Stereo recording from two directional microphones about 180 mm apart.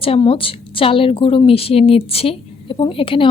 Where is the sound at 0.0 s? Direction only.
30° left (ahead or behind).